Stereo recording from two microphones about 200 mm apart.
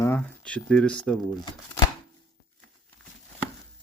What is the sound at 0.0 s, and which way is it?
Speech, 10° left (ahead or behind).